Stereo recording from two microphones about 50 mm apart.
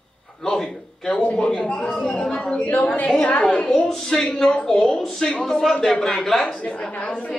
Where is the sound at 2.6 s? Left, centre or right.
Left.